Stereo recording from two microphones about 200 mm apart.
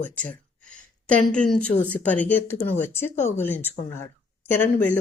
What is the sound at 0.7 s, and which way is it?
A woman's voice, 5° left (ahead or behind).